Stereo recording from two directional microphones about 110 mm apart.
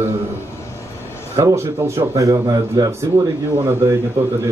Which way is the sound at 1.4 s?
25° right (ahead or behind).